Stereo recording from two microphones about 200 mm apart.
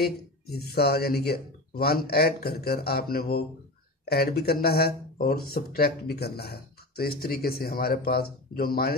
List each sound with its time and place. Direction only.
0.0 s speech: 50° left (ahead or behind)